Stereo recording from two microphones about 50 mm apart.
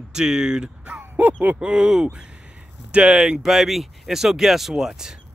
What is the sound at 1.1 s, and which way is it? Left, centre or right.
Speech, right.